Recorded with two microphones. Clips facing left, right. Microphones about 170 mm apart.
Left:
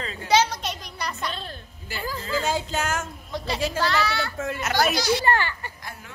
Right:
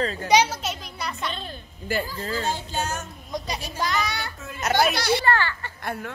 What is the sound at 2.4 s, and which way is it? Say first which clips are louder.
Speech: left 2 dB; 90° left.